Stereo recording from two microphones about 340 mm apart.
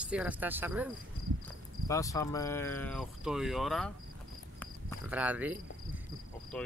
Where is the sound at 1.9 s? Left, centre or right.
Centre.